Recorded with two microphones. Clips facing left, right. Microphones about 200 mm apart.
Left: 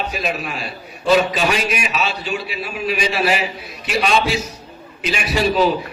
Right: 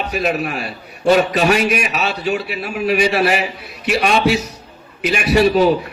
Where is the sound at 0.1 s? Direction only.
65° right (ahead or behind).